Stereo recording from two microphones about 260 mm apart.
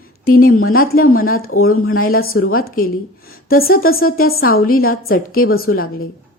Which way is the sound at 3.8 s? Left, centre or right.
Left.